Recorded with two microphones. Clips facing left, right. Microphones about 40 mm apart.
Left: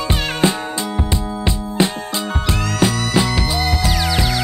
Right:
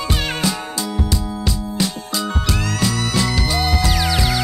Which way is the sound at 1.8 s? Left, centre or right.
Left.